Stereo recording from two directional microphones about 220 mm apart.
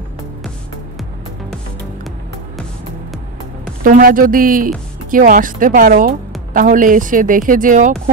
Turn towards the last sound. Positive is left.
turn(degrees=-35)  # may be behind; listen again after turning